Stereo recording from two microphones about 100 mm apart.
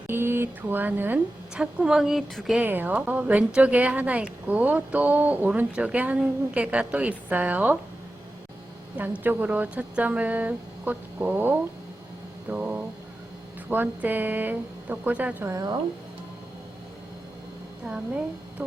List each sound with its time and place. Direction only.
0.1 s speech: 25° right (ahead or behind)
1.5 s a woman's voice: 5° right (ahead or behind)
2.6 s a woman's voice: 20° right (ahead or behind)
9.0 s a woman's voice: 20° right (ahead or behind)
15.4 s speech: 35° right (ahead or behind)